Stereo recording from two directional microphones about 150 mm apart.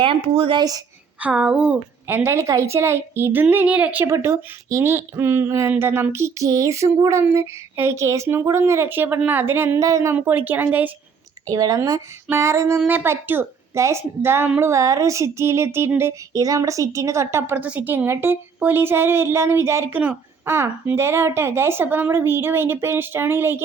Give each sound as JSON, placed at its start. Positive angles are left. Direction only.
{"t": 0.0, "sound": "a woman's voice", "side_deg": -35}
{"t": 1.2, "sound": "a woman's voice", "side_deg": -10}
{"t": 11.5, "sound": "a woman's voice", "side_deg": -25}